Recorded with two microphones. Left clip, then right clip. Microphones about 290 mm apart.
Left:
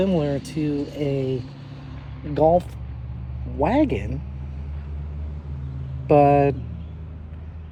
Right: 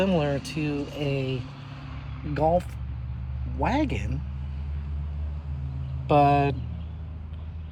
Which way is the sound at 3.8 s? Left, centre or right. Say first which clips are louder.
Left 7 dB; centre.